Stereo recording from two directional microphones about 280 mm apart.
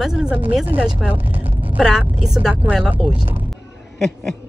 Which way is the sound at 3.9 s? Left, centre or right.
Centre.